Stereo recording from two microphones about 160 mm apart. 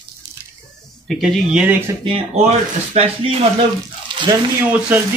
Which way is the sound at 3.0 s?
40° right (ahead or behind).